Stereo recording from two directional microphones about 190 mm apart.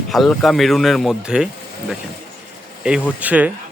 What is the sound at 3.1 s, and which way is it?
Speech, 5° right (ahead or behind).